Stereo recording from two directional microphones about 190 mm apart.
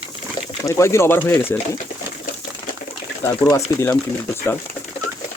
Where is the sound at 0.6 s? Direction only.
15° left (ahead or behind).